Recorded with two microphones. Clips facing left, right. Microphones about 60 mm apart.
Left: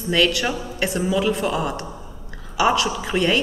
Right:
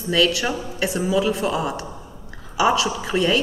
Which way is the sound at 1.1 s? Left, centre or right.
Left.